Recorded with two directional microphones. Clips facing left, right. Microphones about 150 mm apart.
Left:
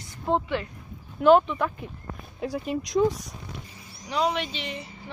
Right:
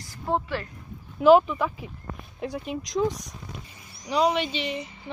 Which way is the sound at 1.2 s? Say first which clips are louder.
Right 1 dB; 5° right (ahead or behind).